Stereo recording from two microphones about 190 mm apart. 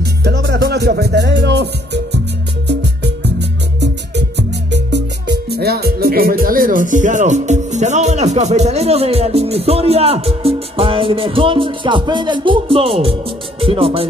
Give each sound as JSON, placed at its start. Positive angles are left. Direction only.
{"t": 0.2, "sound": "music", "side_deg": -60}
{"t": 3.0, "sound": "music", "side_deg": -65}
{"t": 13.6, "sound": "speech", "side_deg": -30}